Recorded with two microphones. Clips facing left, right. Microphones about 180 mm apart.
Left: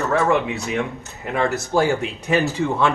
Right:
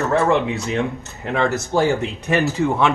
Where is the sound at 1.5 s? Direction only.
20° right (ahead or behind).